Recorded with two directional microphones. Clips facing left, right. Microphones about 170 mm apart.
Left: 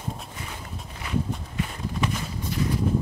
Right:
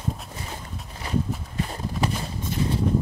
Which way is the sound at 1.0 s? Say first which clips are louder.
Right 2 dB; 35° right (ahead or behind).